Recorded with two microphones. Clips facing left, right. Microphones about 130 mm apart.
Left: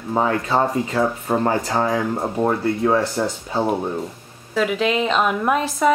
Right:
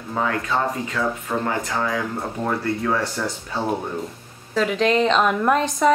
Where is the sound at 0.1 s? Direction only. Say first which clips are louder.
Left 4 dB; 30° left (ahead or behind).